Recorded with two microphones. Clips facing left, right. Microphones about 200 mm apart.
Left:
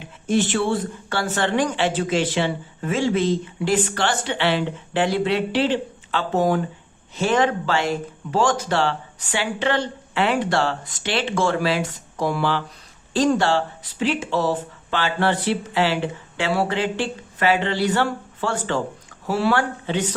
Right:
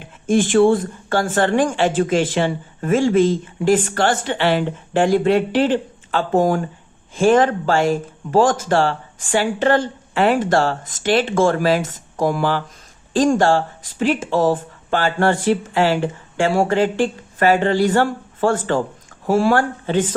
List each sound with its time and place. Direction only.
0.3 s speech: 50° right (ahead or behind)